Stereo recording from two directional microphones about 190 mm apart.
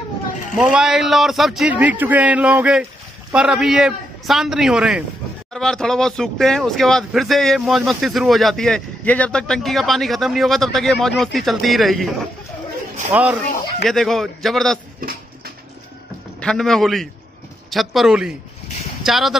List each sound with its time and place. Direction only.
0.6 s speech: 5° right (ahead or behind)
13.1 s speech: 10° right (ahead or behind)
15.0 s a sound: 50° right (ahead or behind)
16.3 s speech: 5° left (ahead or behind)